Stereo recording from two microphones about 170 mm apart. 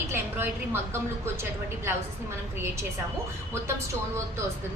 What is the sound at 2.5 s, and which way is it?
Speech, 15° right (ahead or behind).